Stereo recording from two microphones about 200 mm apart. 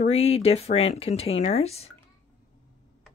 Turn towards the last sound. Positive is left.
turn(degrees=30)  # may be behind; listen again after turning